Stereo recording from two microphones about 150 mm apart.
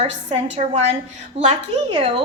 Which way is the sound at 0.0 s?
45° right (ahead or behind).